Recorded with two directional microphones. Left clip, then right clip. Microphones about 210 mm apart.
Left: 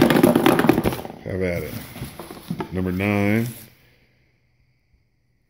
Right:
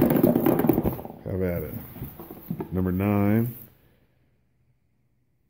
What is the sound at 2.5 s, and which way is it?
Speech, centre (ahead or behind).